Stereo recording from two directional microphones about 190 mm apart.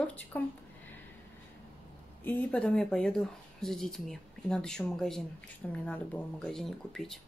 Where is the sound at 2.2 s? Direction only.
5° left (ahead or behind).